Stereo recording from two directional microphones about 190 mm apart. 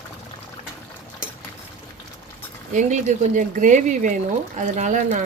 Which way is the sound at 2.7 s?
40° right (ahead or behind).